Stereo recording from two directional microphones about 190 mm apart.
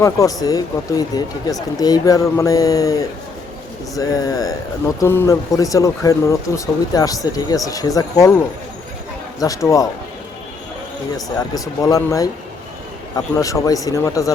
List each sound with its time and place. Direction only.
0.0 s speech: 15° left (ahead or behind)
9.6 s speech: 15° left (ahead or behind)
11.3 s speech: 20° left (ahead or behind)